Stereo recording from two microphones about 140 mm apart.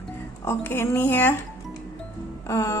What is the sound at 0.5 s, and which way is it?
Speech, 15° left (ahead or behind).